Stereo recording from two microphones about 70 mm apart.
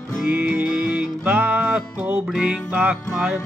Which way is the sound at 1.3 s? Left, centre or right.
Right.